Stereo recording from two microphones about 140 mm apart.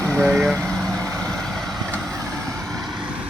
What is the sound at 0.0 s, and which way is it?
Vehicle, 10° left (ahead or behind).